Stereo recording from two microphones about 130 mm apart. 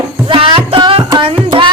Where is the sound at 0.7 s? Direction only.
40° right (ahead or behind).